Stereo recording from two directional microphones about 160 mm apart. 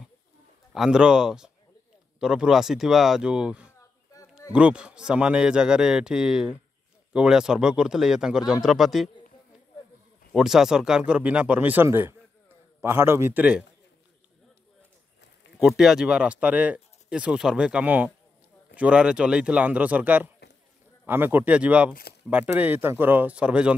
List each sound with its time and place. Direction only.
0.7 s a man's voice: 5° right (ahead or behind)
4.1 s a sound: 20° left (ahead or behind)
4.5 s a man's voice: 5° right (ahead or behind)
10.3 s speech: 5° right (ahead or behind)
15.6 s speech: 5° right (ahead or behind)